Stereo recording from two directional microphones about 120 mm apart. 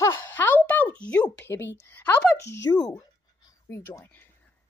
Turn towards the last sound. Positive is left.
turn(degrees=15)  # may be behind; listen again after turning